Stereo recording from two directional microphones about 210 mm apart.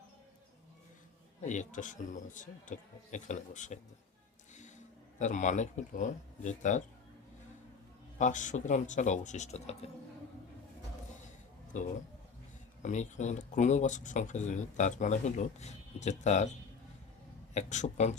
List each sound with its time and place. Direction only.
1.5 s speech: 35° left (ahead or behind)
5.2 s speech: 35° left (ahead or behind)
8.2 s speech: 35° left (ahead or behind)
11.7 s speech: 35° left (ahead or behind)
17.5 s speech: 35° left (ahead or behind)